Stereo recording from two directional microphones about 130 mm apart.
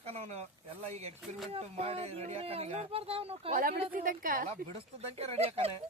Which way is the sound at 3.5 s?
90° right.